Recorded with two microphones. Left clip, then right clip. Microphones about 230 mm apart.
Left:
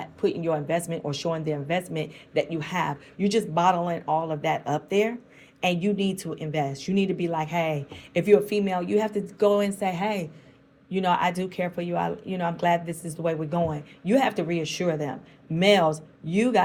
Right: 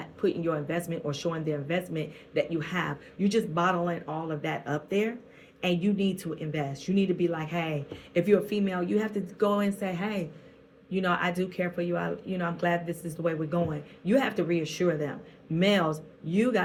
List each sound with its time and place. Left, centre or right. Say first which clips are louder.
0.0 s speech: left 2 dB; left